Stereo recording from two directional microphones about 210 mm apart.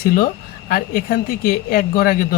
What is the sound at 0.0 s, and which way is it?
Speech, 45° left (ahead or behind).